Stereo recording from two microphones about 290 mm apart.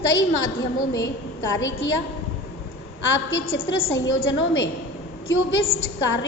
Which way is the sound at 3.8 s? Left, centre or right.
Left.